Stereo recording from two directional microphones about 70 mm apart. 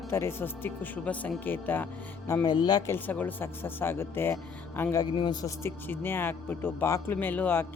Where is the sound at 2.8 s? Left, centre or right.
Left.